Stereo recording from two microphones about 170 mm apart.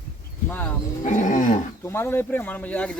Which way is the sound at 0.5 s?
10° left (ahead or behind).